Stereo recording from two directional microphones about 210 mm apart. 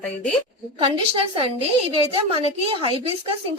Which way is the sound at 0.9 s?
25° right (ahead or behind).